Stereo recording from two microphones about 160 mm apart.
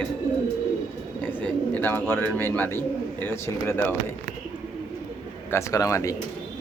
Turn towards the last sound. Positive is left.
turn(degrees=20)  # may be behind; listen again after turning